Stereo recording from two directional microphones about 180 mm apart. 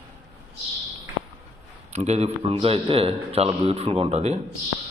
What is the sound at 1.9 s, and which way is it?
A man's voice, 40° right (ahead or behind).